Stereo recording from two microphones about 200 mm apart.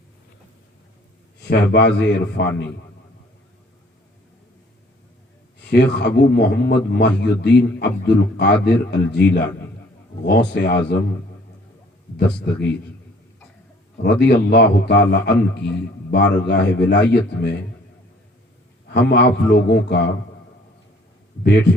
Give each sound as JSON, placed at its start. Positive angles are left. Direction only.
{"t": 1.4, "sound": "a man's voice", "side_deg": 60}
{"t": 5.5, "sound": "a man's voice", "side_deg": 60}
{"t": 12.3, "sound": "a man's voice", "side_deg": 5}
{"t": 14.0, "sound": "a man's voice", "side_deg": 60}
{"t": 18.9, "sound": "a man's voice", "side_deg": 60}
{"t": 21.4, "sound": "a man's voice", "side_deg": 55}